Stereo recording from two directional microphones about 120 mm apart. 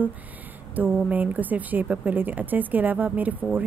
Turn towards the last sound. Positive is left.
turn(degrees=-15)  # may be behind; listen again after turning